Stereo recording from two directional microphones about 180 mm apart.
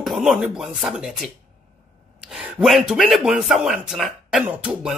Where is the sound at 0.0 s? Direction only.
Centre (ahead or behind).